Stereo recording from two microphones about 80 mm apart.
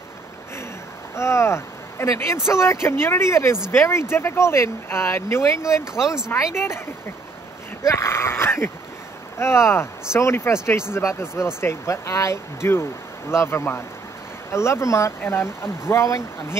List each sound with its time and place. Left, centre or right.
1.1 s speech: left
5.9 s speech: centre
6.3 s speech: left
7.8 s speech: left